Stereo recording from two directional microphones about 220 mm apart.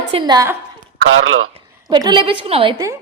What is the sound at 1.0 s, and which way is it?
Speech, 65° right (ahead or behind).